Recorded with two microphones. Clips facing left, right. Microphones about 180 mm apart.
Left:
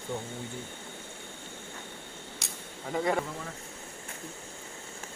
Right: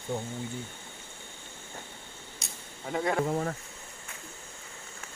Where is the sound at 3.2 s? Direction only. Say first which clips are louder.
Right 10 dB; 50° right (ahead or behind).